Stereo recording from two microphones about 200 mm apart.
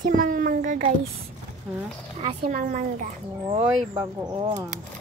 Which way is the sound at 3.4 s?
25° right (ahead or behind).